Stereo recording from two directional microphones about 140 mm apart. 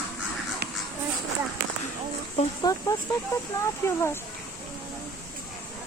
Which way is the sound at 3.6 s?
20° left (ahead or behind).